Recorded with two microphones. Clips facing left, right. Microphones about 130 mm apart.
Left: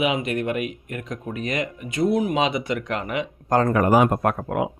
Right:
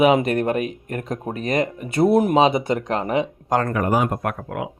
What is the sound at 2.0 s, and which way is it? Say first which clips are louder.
Speech: right 4 dB; 60° right (ahead or behind).